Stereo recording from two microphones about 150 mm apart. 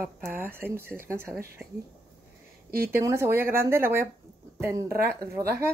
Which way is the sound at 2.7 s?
80° right.